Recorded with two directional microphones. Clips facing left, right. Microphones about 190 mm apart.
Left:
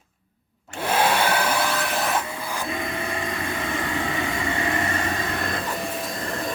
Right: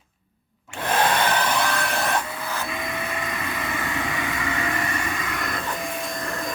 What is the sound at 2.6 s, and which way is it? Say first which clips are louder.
Printer: left 2 dB; 30° left (ahead or behind).